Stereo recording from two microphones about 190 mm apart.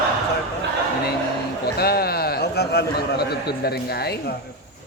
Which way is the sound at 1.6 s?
55° left (ahead or behind).